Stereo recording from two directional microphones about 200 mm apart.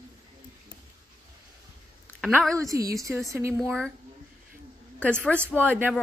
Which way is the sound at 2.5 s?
15° right (ahead or behind).